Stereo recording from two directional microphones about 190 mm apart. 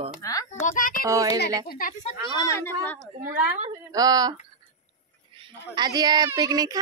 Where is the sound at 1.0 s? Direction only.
15° right (ahead or behind).